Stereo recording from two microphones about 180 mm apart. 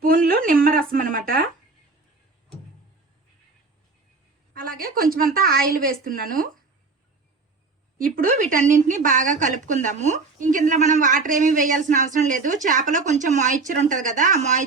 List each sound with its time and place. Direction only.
0.0 s a sound: 55° right (ahead or behind)
4.5 s a woman's voice: 50° right (ahead or behind)
8.1 s a woman's voice: 50° right (ahead or behind)